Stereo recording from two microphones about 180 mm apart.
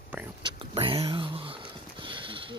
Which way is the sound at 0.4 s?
30° right (ahead or behind).